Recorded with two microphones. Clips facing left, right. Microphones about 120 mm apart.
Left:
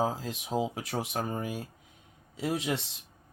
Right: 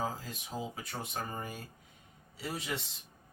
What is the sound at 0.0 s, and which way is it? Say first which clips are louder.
Speech: left 7 dB; 90° left.